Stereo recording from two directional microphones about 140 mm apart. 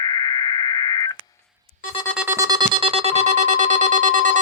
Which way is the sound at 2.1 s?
10° right (ahead or behind).